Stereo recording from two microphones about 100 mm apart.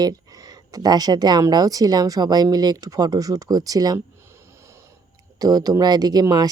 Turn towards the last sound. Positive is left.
turn(degrees=-45)  # may be behind; listen again after turning